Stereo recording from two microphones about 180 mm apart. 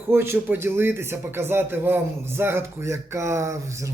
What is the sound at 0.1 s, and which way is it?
A man's voice, 10° right (ahead or behind).